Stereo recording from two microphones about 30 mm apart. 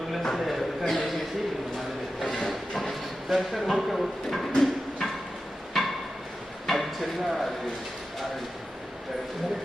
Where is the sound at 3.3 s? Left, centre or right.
Centre.